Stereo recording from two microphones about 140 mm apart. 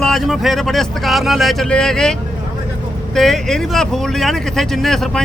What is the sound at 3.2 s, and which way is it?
Speech, centre (ahead or behind).